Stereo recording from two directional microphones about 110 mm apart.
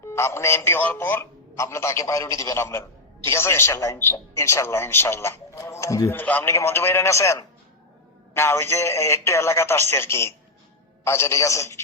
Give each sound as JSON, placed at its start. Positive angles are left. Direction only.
{"t": 0.1, "sound": "a man's voice", "side_deg": 25}
{"t": 6.1, "sound": "a man's voice", "side_deg": 15}